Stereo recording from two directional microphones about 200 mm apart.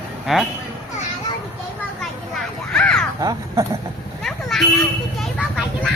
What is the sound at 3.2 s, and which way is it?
Speech, 20° right (ahead or behind).